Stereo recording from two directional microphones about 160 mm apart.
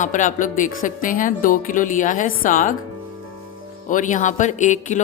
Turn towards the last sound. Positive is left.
turn(degrees=50)  # may be behind; listen again after turning